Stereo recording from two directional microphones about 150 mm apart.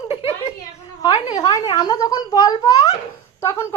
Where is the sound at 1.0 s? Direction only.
25° left (ahead or behind).